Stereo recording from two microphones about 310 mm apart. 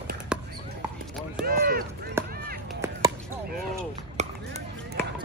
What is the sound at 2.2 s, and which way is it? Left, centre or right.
Run, centre.